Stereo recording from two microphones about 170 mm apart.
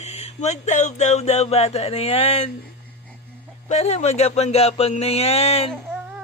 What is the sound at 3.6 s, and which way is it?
Speech, 40° left (ahead or behind).